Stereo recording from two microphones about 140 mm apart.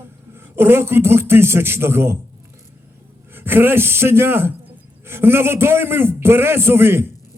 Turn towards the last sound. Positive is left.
turn(degrees=-15)  # may be behind; listen again after turning